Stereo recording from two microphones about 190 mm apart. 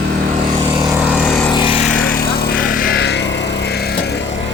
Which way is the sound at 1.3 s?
10° left (ahead or behind).